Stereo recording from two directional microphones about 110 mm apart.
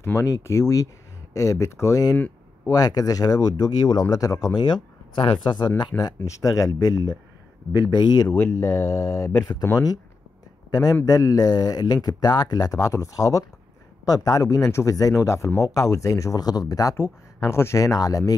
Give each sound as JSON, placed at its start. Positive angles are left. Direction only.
{"t": 0.0, "sound": "speech", "side_deg": 25}
{"t": 2.1, "sound": "a sound", "side_deg": 15}
{"t": 2.7, "sound": "speech", "side_deg": 35}
{"t": 5.1, "sound": "speech", "side_deg": 50}
{"t": 8.3, "sound": "speech", "side_deg": 15}
{"t": 8.5, "sound": "speech", "side_deg": 30}
{"t": 10.7, "sound": "a man's voice", "side_deg": 35}